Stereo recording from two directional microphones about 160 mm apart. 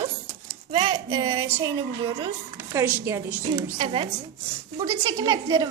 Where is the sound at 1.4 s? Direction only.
10° right (ahead or behind).